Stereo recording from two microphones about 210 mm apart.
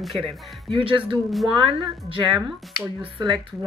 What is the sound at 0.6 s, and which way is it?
Speech, 25° right (ahead or behind).